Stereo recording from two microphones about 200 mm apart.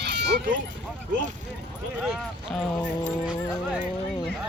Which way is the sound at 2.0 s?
Centre (ahead or behind).